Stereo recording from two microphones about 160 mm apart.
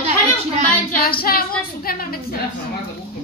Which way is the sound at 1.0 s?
70° left (ahead or behind).